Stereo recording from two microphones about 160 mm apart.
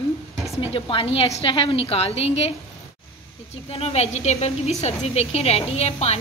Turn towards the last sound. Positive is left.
turn(degrees=40)  # may be behind; listen again after turning